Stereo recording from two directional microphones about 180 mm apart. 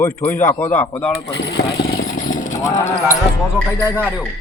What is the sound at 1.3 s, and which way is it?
Vehicle, 65° left (ahead or behind).